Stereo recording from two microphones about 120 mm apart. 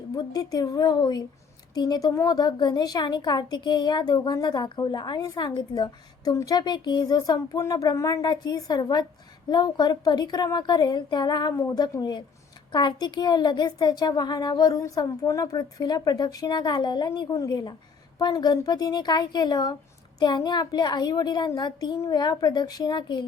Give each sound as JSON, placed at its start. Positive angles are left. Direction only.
{"t": 0.1, "sound": "a woman's voice", "side_deg": 30}